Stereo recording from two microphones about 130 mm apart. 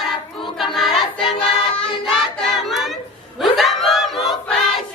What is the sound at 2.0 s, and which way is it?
Music, centre (ahead or behind).